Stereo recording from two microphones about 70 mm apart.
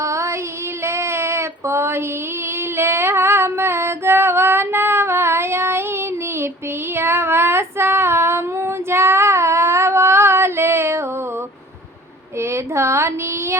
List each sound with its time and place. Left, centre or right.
0.0 s child singing: right
0.8 s female singing: right
12.4 s a sound: right